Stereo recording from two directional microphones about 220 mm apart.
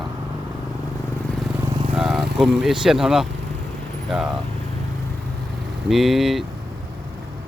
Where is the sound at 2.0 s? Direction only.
Centre (ahead or behind).